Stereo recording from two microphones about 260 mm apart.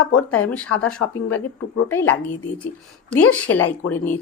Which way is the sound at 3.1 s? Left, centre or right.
Left.